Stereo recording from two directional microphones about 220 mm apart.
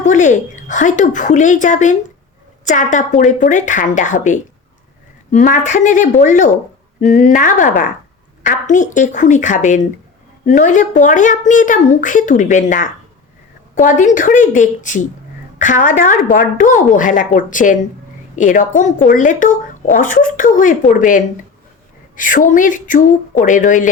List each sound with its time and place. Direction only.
0.0 s speech: 35° left (ahead or behind)